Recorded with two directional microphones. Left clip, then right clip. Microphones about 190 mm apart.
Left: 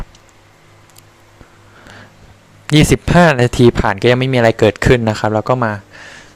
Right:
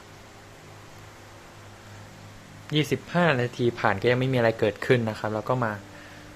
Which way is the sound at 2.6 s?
60° left (ahead or behind).